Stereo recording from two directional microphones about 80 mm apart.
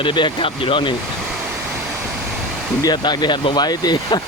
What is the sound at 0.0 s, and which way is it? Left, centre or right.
Speech, left.